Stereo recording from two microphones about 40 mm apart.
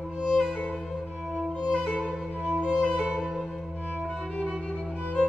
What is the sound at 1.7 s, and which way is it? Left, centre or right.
Music, left.